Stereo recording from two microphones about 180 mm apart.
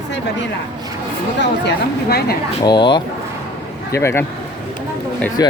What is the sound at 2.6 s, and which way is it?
Speech, 25° left (ahead or behind).